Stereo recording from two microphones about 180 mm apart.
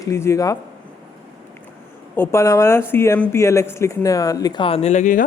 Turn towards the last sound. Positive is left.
turn(degrees=45)  # may be behind; listen again after turning